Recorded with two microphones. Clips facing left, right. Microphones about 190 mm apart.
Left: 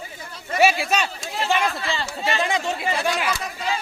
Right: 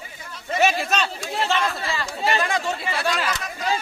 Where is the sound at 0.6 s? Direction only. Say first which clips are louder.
Left 2 dB; 10° left (ahead or behind).